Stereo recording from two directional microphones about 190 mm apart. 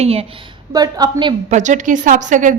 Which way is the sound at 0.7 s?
20° right (ahead or behind).